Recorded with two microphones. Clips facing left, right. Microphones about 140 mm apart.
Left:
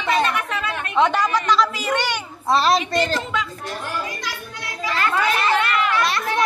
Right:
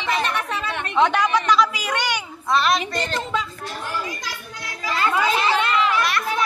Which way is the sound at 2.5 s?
30° left (ahead or behind).